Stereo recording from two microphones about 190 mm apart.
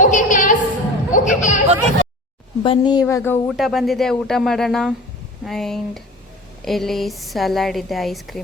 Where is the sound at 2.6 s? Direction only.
25° left (ahead or behind).